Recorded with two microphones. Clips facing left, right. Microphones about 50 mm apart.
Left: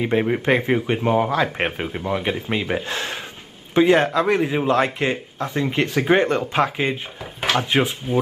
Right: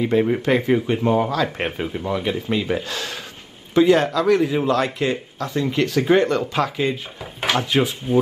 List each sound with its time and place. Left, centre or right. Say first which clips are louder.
0.0 s speech: right 1 dB; left
1.3 s speech: left 1 dB; left
7.3 s speech: even; centre